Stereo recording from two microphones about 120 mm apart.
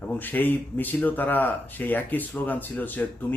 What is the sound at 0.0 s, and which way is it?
Speech, 15° left (ahead or behind).